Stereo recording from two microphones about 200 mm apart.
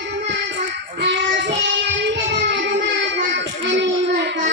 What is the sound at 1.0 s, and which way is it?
Child singing, 60° right (ahead or behind).